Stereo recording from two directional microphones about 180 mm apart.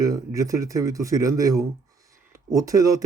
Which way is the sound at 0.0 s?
20° right (ahead or behind).